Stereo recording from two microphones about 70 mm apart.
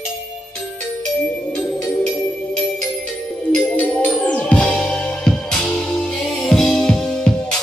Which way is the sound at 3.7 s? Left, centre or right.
Centre.